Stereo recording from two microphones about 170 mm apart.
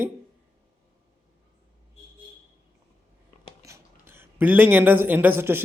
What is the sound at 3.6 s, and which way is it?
Speech, 15° right (ahead or behind).